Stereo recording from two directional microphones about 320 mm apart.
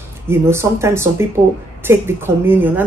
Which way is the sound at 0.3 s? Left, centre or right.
Centre.